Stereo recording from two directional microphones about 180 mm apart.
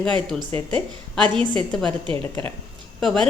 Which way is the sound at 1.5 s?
5° left (ahead or behind).